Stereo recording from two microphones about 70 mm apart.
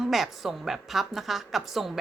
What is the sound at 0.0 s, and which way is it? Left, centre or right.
A woman's voice, centre.